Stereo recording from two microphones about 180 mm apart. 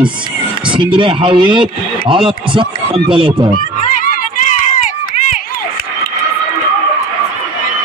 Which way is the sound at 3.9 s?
45° left (ahead or behind).